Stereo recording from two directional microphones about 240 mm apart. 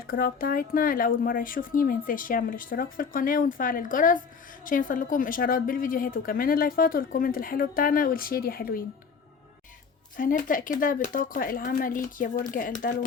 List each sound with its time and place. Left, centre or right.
0.1 s a woman's voice: left
10.2 s a woman's voice: left